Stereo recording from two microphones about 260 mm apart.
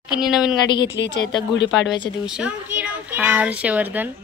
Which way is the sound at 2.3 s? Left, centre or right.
Centre.